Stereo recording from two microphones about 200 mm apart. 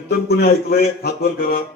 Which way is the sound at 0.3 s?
50° left (ahead or behind).